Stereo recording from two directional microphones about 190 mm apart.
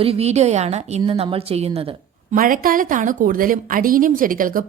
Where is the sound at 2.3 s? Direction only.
50° right (ahead or behind).